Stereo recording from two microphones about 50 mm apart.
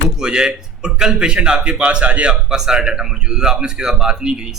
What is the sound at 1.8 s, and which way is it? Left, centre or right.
Speech, right.